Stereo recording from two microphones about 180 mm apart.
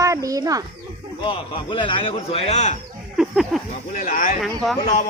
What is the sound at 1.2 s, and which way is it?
A man's voice, 25° left (ahead or behind).